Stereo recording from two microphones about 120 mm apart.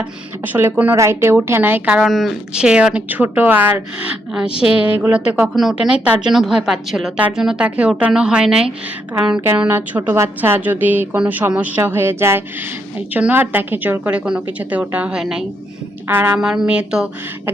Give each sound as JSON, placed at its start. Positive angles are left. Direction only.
{"t": 0.0, "sound": "a woman's voice", "side_deg": -15}
{"t": 2.0, "sound": "a woman's voice", "side_deg": 0}
{"t": 16.0, "sound": "a woman's voice", "side_deg": -15}
{"t": 16.4, "sound": "a woman's voice", "side_deg": -5}